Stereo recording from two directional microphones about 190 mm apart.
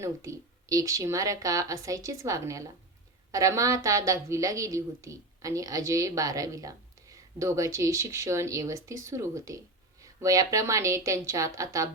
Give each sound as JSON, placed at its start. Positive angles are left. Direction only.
{"t": 0.0, "sound": "a woman's voice", "side_deg": -15}